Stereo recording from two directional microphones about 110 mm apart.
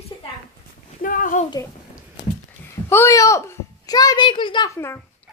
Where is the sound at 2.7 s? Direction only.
25° left (ahead or behind).